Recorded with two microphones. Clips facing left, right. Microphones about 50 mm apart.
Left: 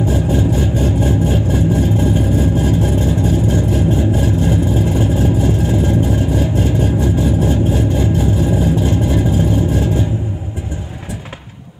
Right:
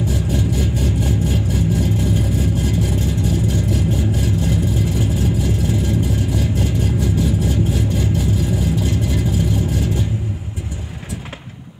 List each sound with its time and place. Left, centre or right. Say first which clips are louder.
0.0 s vehicle: left 5 dB; left